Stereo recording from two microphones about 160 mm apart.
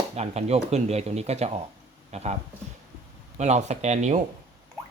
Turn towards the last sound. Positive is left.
turn(degrees=-45)  # may be behind; listen again after turning